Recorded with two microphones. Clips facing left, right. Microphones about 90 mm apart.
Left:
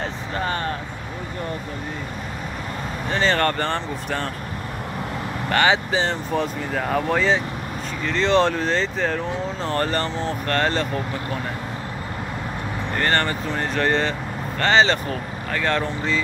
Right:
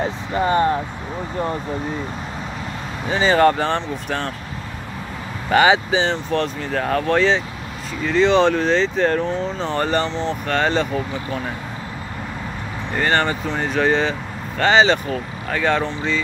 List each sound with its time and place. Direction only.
0.4 s speech: 20° right (ahead or behind)
3.1 s speech: 5° right (ahead or behind)
5.5 s speech: 10° right (ahead or behind)
13.0 s speech: 5° right (ahead or behind)